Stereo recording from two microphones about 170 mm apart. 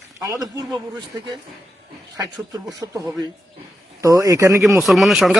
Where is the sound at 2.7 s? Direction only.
20° right (ahead or behind).